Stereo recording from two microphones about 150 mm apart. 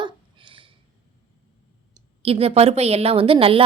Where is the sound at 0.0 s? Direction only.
35° right (ahead or behind).